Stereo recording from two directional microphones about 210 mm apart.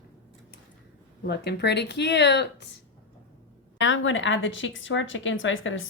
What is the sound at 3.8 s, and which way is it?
A woman's voice, 65° left (ahead or behind).